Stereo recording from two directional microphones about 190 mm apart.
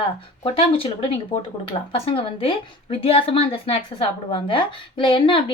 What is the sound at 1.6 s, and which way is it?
A woman's voice, 30° left (ahead or behind).